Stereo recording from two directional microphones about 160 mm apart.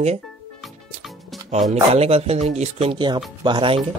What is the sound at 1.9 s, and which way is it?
Speech, 40° right (ahead or behind).